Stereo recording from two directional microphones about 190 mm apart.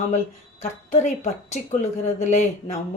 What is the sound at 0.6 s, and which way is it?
Speech, 40° left (ahead or behind).